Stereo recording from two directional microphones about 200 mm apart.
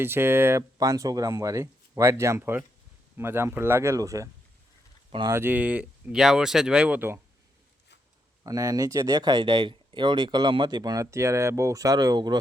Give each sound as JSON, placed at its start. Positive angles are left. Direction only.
{"t": 0.0, "sound": "speech", "side_deg": -10}
{"t": 5.3, "sound": "speech", "side_deg": -10}
{"t": 8.4, "sound": "speech", "side_deg": -15}